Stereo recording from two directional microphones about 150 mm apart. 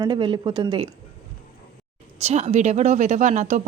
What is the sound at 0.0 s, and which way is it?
Speech, 35° right (ahead or behind).